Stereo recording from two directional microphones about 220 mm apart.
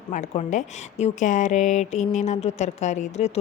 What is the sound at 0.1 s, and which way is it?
Speech, 35° left (ahead or behind).